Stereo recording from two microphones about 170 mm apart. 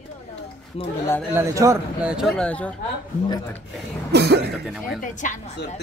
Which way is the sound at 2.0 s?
Centre (ahead or behind).